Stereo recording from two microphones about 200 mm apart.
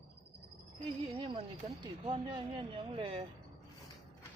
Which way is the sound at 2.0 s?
25° right (ahead or behind).